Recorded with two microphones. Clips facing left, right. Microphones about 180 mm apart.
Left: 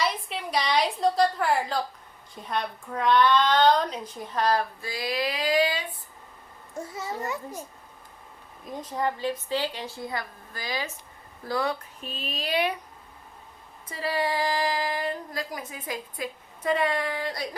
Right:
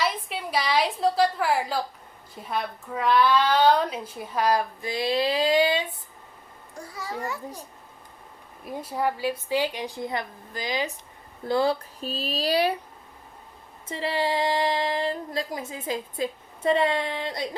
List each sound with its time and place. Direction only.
0.0 s a woman's voice: 5° right (ahead or behind)
4.9 s speech: 25° right (ahead or behind)
6.7 s a child's voice: 25° left (ahead or behind)
8.6 s a woman's voice: 10° right (ahead or behind); by 12.7 s 35° right (ahead or behind)
13.8 s speech: 25° right (ahead or behind)